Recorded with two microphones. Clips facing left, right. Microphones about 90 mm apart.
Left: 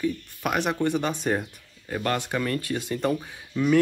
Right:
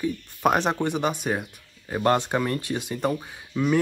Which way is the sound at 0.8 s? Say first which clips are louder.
Even; 15° right (ahead or behind).